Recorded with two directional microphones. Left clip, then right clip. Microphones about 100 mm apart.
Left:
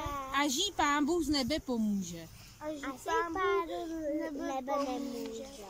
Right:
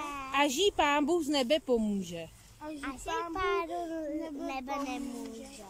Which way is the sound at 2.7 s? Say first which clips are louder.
Left 1 dB; 10° right (ahead or behind).